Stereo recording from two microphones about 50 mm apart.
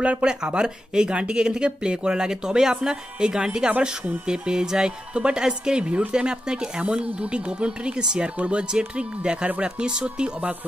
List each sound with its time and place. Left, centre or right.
0.0 s speech: right